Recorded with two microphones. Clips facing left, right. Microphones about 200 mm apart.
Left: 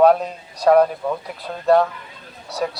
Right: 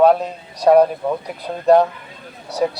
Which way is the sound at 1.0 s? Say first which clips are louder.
Right 3 dB; 15° right (ahead or behind).